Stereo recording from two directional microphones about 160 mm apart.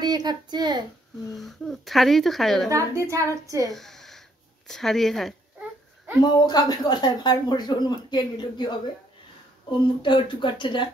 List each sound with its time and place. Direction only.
0.0 s speech: 25° right (ahead or behind)
1.3 s speech: centre (ahead or behind)
2.7 s a woman's voice: 20° right (ahead or behind)
3.7 s a sound: centre (ahead or behind)
4.6 s speech: centre (ahead or behind)
6.2 s speech: 25° left (ahead or behind)